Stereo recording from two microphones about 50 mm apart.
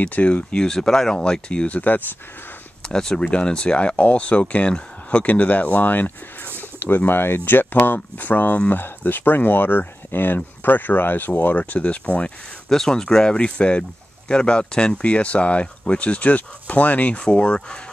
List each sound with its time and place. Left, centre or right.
0.0 s speech: left
0.7 s speech: centre
1.7 s speech: left
2.9 s speech: centre
12.6 s speech: centre